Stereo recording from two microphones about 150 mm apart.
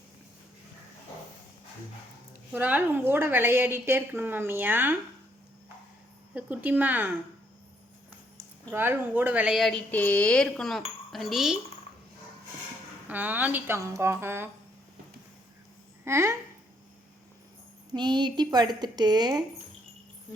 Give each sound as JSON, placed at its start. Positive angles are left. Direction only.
{"t": 2.5, "sound": "a woman's voice", "side_deg": -10}
{"t": 6.3, "sound": "a woman's voice", "side_deg": -10}
{"t": 8.7, "sound": "speech", "side_deg": -15}
{"t": 13.1, "sound": "a woman's voice", "side_deg": -10}
{"t": 16.0, "sound": "a woman's voice", "side_deg": -20}
{"t": 17.9, "sound": "a woman's voice", "side_deg": -30}